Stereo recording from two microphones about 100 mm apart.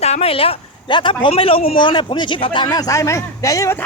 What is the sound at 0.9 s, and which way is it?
Speech, 50° left (ahead or behind).